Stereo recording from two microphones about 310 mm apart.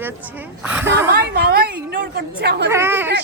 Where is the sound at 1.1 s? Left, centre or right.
Right.